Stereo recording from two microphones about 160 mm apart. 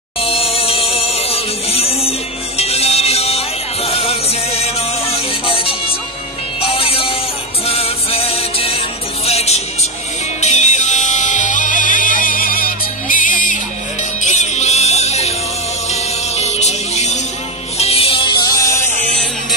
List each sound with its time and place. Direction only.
0.2 s music: 35° left (ahead or behind); by 18.9 s 20° left (ahead or behind)